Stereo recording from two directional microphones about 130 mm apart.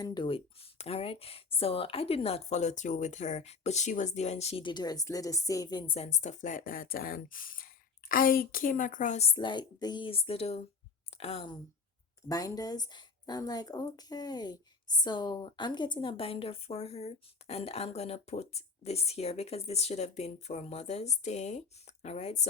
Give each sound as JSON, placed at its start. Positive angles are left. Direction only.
{"t": 0.0, "sound": "a woman's voice", "side_deg": 35}
{"t": 4.6, "sound": "speech", "side_deg": 35}
{"t": 6.2, "sound": "a woman's voice", "side_deg": 80}
{"t": 9.3, "sound": "a woman's voice", "side_deg": 35}
{"t": 12.3, "sound": "a woman's voice", "side_deg": 30}